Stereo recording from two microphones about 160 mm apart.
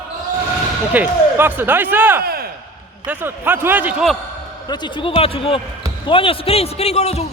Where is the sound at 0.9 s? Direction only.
10° right (ahead or behind).